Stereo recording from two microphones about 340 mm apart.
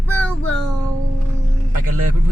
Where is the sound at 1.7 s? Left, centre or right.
Right.